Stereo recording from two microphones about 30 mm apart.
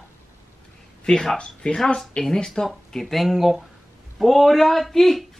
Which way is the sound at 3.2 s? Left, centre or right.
Centre.